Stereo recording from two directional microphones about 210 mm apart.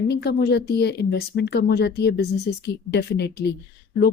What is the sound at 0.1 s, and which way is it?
Speech, 50° left (ahead or behind).